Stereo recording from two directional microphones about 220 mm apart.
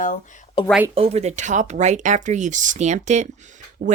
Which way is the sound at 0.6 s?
25° left (ahead or behind).